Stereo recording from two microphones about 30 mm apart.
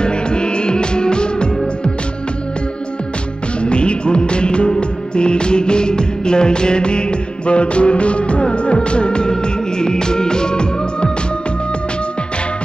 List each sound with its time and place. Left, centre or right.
0.0 s music: left
3.6 s music: left